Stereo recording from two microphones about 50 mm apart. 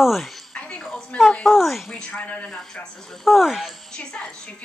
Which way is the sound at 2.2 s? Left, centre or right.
Left.